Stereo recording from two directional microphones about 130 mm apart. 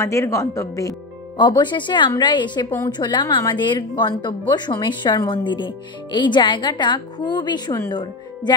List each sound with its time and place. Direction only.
0.0 s speech: 20° left (ahead or behind)
1.4 s speech: 35° left (ahead or behind)